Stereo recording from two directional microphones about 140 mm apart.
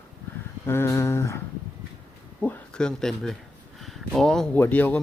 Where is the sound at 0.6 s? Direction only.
15° left (ahead or behind).